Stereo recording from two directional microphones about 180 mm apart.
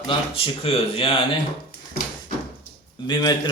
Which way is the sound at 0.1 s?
30° left (ahead or behind).